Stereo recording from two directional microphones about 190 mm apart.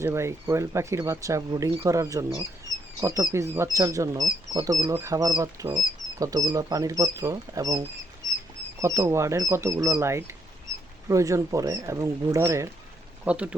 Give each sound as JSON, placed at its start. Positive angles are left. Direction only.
{"t": 0.0, "sound": "speech", "side_deg": -15}